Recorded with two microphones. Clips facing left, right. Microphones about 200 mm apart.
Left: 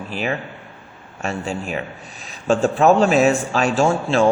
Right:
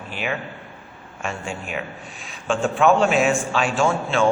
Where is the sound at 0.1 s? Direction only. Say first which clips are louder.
Left 3 dB; 35° left (ahead or behind).